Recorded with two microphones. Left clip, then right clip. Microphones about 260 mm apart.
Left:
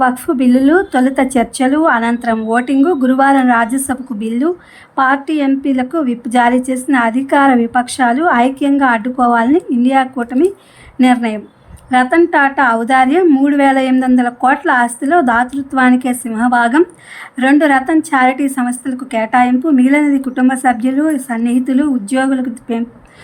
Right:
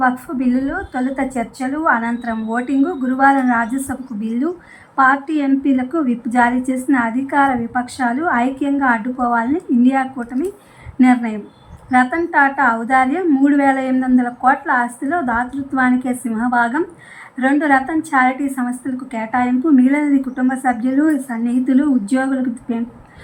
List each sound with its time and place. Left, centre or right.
0.0 s a woman's voice: left